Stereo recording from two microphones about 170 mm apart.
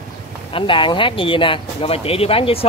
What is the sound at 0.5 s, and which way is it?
Speech, 30° left (ahead or behind).